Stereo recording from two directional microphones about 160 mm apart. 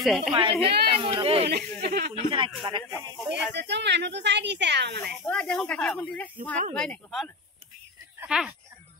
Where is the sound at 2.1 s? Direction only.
30° right (ahead or behind).